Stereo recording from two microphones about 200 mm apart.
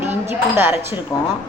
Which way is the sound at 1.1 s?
15° left (ahead or behind).